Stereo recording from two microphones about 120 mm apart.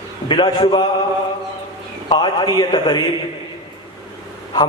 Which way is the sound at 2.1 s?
35° left (ahead or behind).